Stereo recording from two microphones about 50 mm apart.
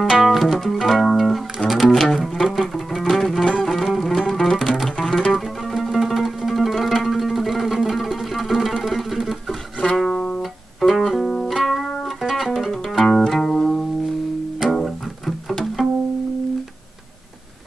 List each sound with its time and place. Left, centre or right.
0.0 s music: centre
1.6 s music: left
2.0 s music: centre
5.2 s zither: centre
9.9 s music: centre
13.0 s music: centre